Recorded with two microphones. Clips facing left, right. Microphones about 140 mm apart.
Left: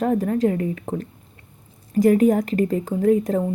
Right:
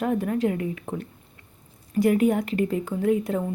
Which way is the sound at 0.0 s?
40° left (ahead or behind).